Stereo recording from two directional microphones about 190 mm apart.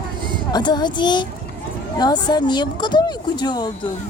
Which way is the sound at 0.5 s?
20° left (ahead or behind).